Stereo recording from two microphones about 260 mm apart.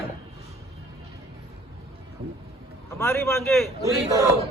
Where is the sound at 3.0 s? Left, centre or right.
Centre.